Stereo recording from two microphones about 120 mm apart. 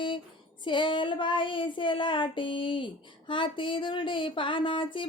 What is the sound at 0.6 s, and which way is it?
Child singing, 40° left (ahead or behind).